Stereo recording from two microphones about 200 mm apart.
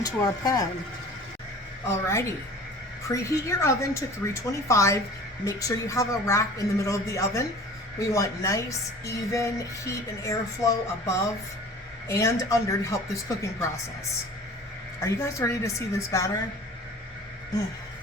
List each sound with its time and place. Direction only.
0.0 s speech: 20° left (ahead or behind)
1.9 s speech: 15° left (ahead or behind)
15.0 s speech: 15° left (ahead or behind)